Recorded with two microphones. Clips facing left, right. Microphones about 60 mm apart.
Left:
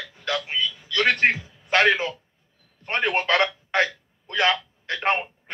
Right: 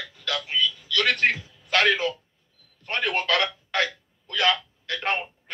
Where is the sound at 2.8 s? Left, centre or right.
Left.